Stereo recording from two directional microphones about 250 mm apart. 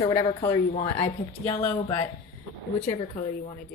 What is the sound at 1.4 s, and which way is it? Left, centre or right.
Speech, centre.